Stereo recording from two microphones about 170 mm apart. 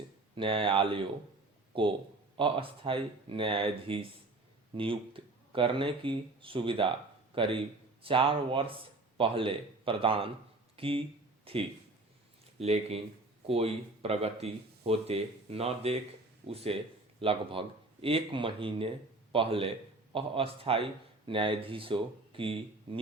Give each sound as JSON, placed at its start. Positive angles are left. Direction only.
{"t": 0.3, "sound": "speech", "side_deg": -30}